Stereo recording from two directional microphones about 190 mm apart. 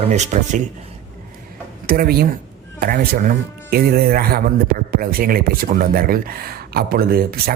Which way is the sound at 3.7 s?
55° right (ahead or behind).